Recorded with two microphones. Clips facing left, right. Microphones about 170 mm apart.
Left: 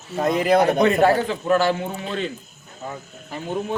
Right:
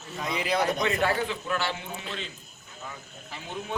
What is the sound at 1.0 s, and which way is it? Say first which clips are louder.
A man's voice: left 9 dB; 45° left (ahead or behind).